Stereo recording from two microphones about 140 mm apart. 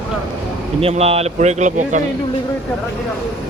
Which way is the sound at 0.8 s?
45° right (ahead or behind).